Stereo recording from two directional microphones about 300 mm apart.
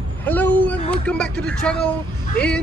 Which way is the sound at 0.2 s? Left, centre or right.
Centre.